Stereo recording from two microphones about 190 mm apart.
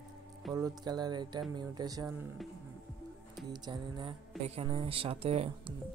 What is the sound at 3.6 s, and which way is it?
Speech, 25° right (ahead or behind).